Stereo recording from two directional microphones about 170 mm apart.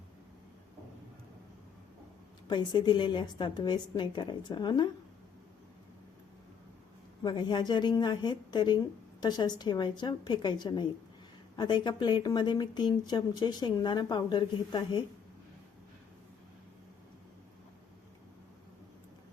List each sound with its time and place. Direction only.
2.5 s speech: 25° left (ahead or behind)
7.2 s speech: 25° left (ahead or behind)